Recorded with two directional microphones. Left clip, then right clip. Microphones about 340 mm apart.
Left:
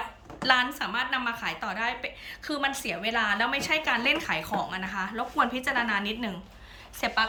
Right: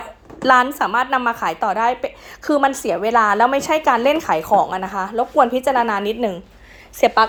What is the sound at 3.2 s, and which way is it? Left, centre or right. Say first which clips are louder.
Speech: right 11 dB; right.